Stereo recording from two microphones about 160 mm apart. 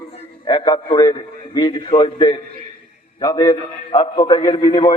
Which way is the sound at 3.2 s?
20° left (ahead or behind).